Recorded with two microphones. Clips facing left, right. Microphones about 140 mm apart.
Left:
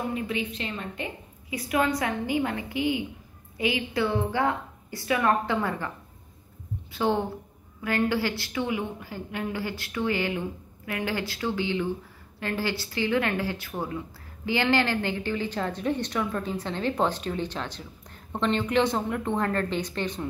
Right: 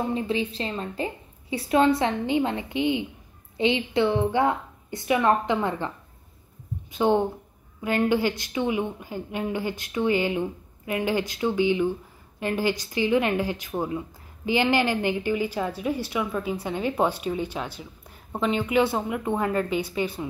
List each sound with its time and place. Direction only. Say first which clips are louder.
0.0 s a woman's voice: right 4 dB; 30° right (ahead or behind)
6.9 s a woman's voice: right 4 dB; 20° right (ahead or behind)